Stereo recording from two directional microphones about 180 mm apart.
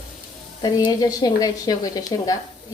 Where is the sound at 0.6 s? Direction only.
20° left (ahead or behind).